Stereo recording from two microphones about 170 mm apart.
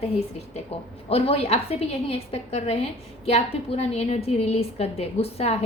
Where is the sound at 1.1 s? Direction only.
35° left (ahead or behind).